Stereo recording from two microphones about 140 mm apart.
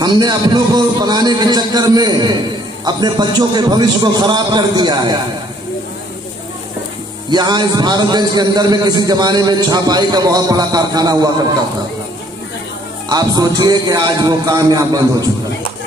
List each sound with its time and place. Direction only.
0.0 s a man's voice: 30° right (ahead or behind)
7.2 s a man's voice: 30° right (ahead or behind)
13.1 s a man's voice: 30° right (ahead or behind)